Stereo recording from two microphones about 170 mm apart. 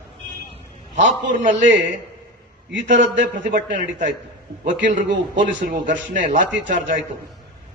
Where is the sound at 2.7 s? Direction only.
90° right.